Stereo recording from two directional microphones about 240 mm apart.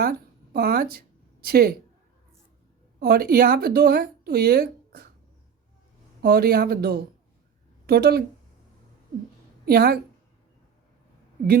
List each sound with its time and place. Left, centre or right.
0.0 s speech: right
3.0 s a woman's voice: right
6.2 s a woman's voice: right
9.6 s a woman's voice: right